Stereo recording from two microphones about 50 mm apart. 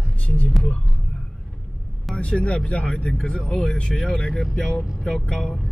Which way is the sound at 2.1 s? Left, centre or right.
Left.